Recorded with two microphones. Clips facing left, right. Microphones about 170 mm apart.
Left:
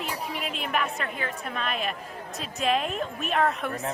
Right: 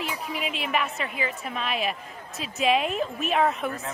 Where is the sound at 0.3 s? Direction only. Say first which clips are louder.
Right 2 dB; centre (ahead or behind).